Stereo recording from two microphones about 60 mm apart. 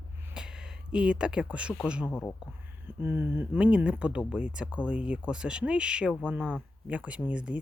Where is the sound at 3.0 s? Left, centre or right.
Right.